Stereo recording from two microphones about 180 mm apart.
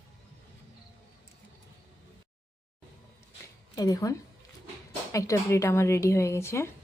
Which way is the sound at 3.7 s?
20° left (ahead or behind).